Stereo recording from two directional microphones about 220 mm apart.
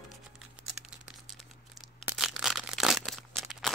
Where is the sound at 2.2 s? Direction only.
Centre (ahead or behind).